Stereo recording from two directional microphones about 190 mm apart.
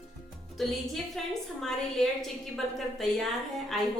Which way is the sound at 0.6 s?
Centre (ahead or behind).